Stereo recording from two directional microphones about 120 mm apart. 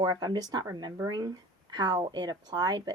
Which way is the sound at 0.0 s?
35° right (ahead or behind).